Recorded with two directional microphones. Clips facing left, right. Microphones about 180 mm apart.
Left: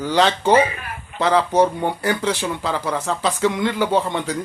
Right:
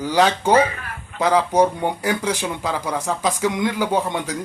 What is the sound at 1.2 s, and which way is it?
Speech, 10° right (ahead or behind).